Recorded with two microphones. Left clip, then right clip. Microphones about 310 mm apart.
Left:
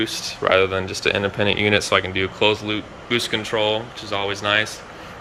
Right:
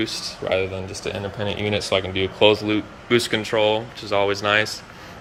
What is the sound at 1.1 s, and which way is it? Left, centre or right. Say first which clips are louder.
Speech: left 7 dB; left.